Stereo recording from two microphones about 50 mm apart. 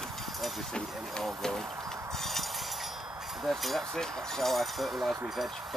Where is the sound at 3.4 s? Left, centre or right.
Centre.